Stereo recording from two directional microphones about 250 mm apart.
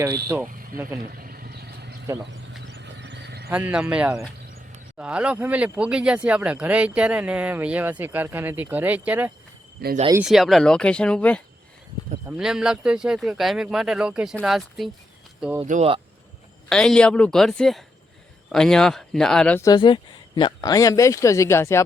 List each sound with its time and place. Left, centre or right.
0.0 s speech: centre
0.4 s vehicle: right
3.5 s speech: centre
9.8 s speech: right
10.2 s speech: centre
15.6 s speech: right
16.6 s speech: centre